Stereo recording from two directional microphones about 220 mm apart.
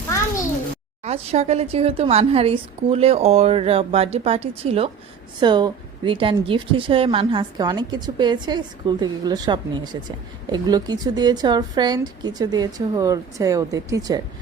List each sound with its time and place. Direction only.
1.0 s a woman's voice: 30° right (ahead or behind)